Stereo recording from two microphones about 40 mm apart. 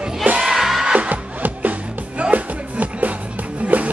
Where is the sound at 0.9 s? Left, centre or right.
Right.